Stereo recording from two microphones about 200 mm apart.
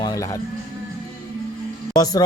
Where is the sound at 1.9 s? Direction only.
20° left (ahead or behind).